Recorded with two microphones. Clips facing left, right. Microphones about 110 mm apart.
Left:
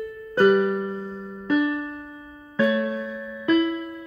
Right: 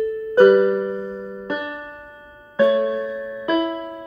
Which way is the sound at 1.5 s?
25° right (ahead or behind).